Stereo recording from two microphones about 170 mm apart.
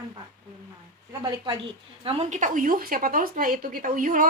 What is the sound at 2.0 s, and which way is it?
A woman's voice, 35° right (ahead or behind).